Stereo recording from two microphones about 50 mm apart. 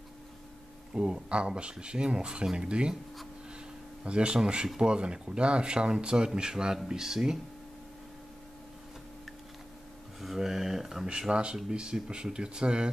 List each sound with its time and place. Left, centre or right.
0.9 s speech: centre
4.0 s speech: right
10.2 s speech: centre
11.1 s speech: centre